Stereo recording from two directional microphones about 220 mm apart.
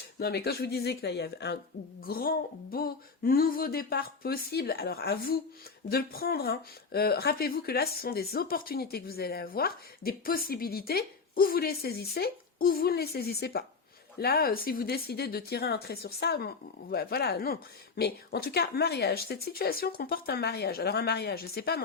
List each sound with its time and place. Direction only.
0.2 s a woman's voice: 45° left (ahead or behind)